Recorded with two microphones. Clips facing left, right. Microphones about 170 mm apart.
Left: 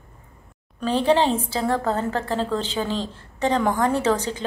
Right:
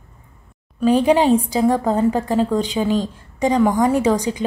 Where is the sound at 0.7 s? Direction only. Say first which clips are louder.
Right 5 dB; 10° right (ahead or behind).